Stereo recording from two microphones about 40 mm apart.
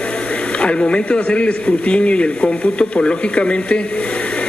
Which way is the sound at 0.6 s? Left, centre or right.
Left.